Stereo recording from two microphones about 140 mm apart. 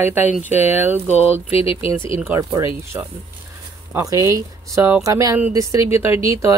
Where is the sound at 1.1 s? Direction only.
45° left (ahead or behind).